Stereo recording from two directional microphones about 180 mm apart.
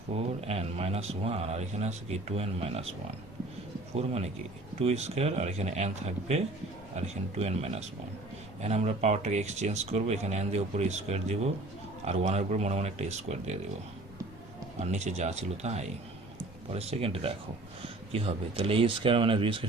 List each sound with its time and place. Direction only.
0.1 s speech: 35° right (ahead or behind)
3.9 s speech: 35° right (ahead or behind)
14.8 s speech: 40° right (ahead or behind)